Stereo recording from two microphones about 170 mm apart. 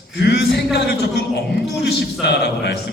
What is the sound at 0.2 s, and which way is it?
A man's voice, 75° left (ahead or behind).